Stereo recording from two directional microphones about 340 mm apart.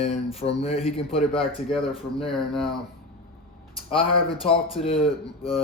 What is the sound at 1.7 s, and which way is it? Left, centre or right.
Speech, centre.